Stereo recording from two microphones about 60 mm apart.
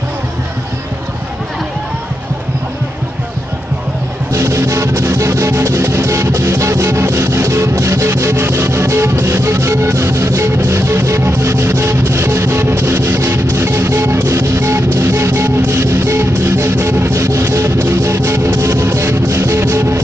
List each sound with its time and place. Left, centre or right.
4.3 s music: right